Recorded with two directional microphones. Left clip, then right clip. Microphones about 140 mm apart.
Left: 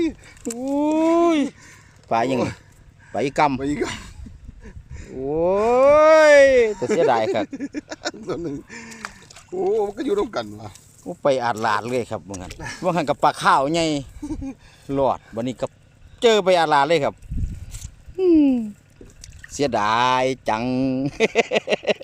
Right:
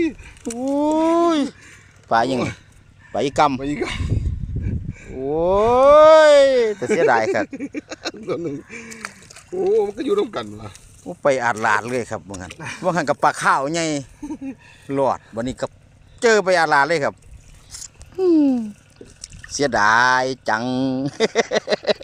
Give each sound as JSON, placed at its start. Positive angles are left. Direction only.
{"t": 0.6, "sound": "speech", "side_deg": 10}
{"t": 2.0, "sound": "speech", "side_deg": 20}
{"t": 8.9, "sound": "a sound", "side_deg": 10}
{"t": 9.8, "sound": "speech", "side_deg": 25}
{"t": 18.2, "sound": "speech", "side_deg": 20}
{"t": 19.5, "sound": "speech", "side_deg": -25}
{"t": 20.6, "sound": "speech", "side_deg": 20}
{"t": 21.1, "sound": "speech", "side_deg": -25}
{"t": 21.6, "sound": "a sound", "side_deg": 10}